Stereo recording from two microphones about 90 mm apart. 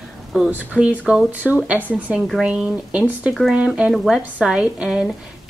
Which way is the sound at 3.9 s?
Centre (ahead or behind).